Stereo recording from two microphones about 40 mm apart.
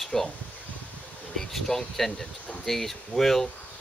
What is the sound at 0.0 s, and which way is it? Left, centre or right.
Speech, centre.